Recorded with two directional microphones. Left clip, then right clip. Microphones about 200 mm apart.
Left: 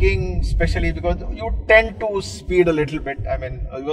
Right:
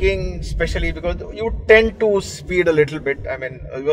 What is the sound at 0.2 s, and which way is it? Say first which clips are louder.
A man's voice: right 1 dB; 60° right (ahead or behind).